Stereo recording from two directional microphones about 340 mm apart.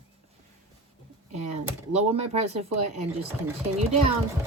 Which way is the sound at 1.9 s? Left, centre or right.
Centre.